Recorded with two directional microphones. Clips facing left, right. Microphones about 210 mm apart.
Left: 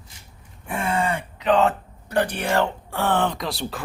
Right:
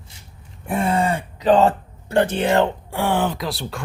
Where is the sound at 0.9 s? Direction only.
35° right (ahead or behind).